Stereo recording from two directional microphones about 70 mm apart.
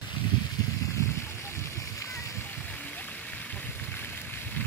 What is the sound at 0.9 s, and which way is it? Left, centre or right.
Splash, left.